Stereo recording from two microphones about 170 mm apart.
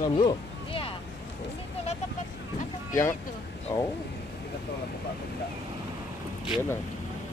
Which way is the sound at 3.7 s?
15° left (ahead or behind).